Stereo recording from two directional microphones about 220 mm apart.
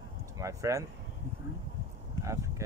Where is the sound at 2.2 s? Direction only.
15° right (ahead or behind).